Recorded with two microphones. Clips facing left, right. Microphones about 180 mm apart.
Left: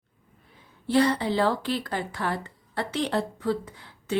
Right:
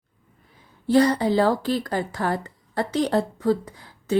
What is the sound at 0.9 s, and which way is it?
Speech, 40° right (ahead or behind).